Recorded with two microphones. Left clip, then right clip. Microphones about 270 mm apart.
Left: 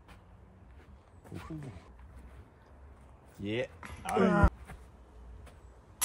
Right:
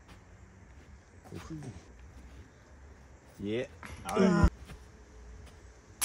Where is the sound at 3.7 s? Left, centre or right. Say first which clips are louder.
Left 1 dB; centre.